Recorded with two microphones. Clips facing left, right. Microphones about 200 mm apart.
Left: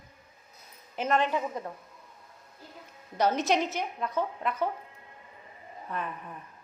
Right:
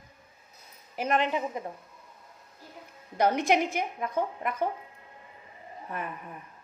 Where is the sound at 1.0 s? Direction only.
15° right (ahead or behind).